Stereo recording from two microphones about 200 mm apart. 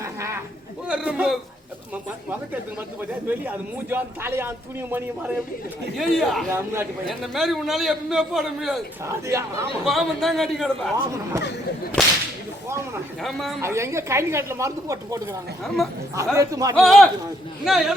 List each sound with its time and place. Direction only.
0.0 s a sound: 15° right (ahead or behind)
0.9 s a man's voice: 5° right (ahead or behind)
3.0 s a man's voice: 10° right (ahead or behind)
6.0 s a man's voice: centre (ahead or behind)
6.5 s a man's voice: 10° right (ahead or behind)
7.1 s a man's voice: centre (ahead or behind)
9.0 s a man's voice: 15° right (ahead or behind)
9.8 s a man's voice: centre (ahead or behind)
12.0 s a man's voice: 5° left (ahead or behind)
13.2 s a man's voice: centre (ahead or behind)
13.6 s a man's voice: 15° right (ahead or behind)
16.7 s a man's voice: centre (ahead or behind)